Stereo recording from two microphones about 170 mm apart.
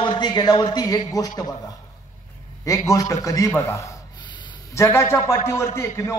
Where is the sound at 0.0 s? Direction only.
25° left (ahead or behind).